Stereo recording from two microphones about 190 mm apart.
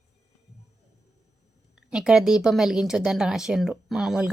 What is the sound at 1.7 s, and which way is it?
A woman's voice, 5° right (ahead or behind).